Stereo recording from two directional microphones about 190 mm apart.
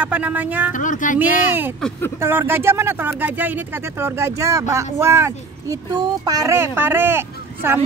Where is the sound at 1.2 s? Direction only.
10° right (ahead or behind).